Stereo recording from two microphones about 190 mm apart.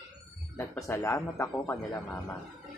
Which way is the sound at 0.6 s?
15° left (ahead or behind).